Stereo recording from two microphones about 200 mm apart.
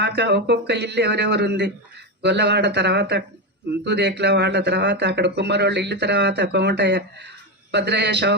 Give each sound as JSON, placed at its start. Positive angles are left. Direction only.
{"t": 0.0, "sound": "speech", "side_deg": -55}